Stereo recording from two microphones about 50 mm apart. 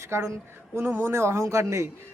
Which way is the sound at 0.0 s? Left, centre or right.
Right.